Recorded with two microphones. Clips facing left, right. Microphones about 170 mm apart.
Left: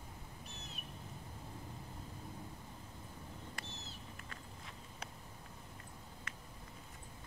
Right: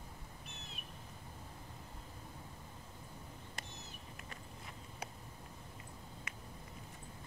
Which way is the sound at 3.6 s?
15° right (ahead or behind).